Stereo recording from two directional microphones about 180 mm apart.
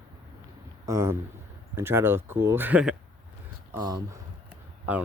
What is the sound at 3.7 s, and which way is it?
Speech, 20° right (ahead or behind).